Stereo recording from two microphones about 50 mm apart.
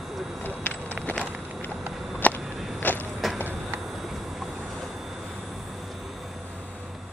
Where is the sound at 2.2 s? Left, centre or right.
Left.